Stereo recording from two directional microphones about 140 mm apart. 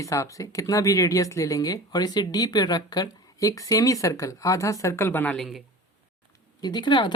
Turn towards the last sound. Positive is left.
turn(degrees=35)  # may be behind; listen again after turning